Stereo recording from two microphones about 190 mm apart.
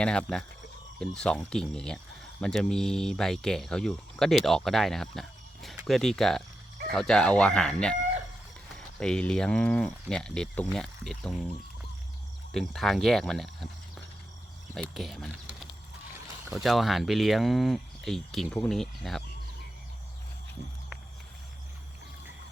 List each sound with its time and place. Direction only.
0.0 s speech: 5° left (ahead or behind)
12.5 s speech: centre (ahead or behind)
16.5 s speech: centre (ahead or behind)